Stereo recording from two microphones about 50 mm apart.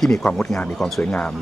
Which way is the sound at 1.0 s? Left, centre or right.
Left.